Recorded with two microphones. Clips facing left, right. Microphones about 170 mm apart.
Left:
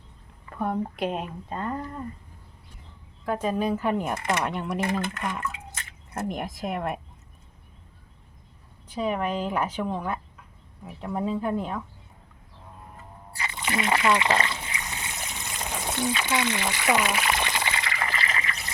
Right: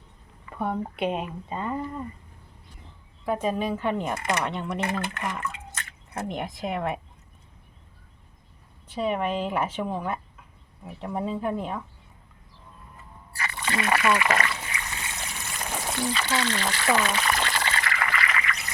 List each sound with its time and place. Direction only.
0.6 s speech: centre (ahead or behind)
3.2 s speech: centre (ahead or behind)
9.0 s speech: centre (ahead or behind)
13.4 s trickle: 15° left (ahead or behind)
16.1 s speech: 15° left (ahead or behind)
18.1 s trickle: 30° left (ahead or behind)